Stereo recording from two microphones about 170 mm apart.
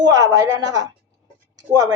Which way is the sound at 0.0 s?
20° right (ahead or behind).